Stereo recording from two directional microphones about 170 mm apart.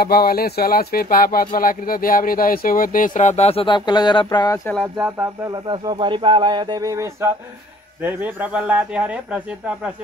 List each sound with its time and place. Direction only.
0.0 s speech: 65° left (ahead or behind); by 4.6 s 25° left (ahead or behind)
4.9 s speech: 10° right (ahead or behind)
5.5 s speech: 25° right (ahead or behind); by 9.4 s 5° right (ahead or behind)